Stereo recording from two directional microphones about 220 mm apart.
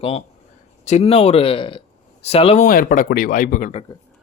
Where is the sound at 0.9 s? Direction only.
30° left (ahead or behind).